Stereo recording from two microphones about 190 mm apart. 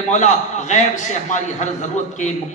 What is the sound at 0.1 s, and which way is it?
Speech, 40° left (ahead or behind).